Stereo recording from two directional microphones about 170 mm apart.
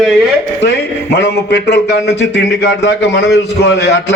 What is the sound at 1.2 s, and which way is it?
Speech, 90° left.